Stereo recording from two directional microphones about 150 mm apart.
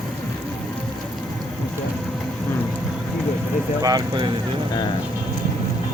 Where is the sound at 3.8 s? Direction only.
25° right (ahead or behind).